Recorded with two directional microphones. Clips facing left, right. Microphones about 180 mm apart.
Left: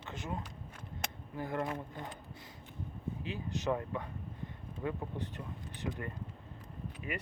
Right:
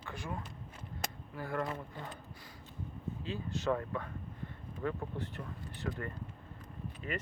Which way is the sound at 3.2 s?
15° left (ahead or behind).